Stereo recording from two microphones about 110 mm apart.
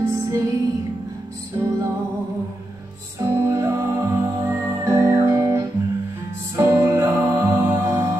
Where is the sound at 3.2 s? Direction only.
25° right (ahead or behind).